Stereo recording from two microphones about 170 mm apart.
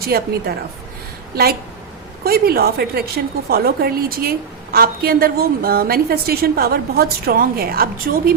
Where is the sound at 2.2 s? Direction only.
65° right (ahead or behind).